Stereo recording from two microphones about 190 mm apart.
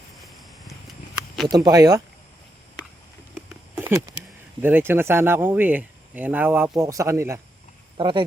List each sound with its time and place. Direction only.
1.5 s speech: 20° right (ahead or behind)
3.8 s speech: 15° right (ahead or behind)
7.9 s speech: 25° right (ahead or behind)